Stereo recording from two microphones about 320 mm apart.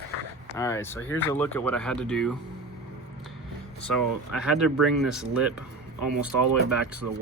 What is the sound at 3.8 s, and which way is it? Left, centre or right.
Speech, centre.